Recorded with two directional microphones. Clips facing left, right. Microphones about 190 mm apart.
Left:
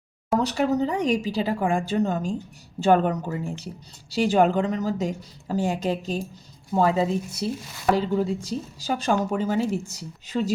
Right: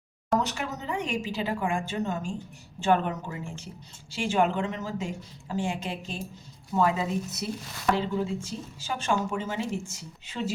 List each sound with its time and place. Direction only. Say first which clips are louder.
0.3 s a woman's voice: left 8 dB; 35° left (ahead or behind)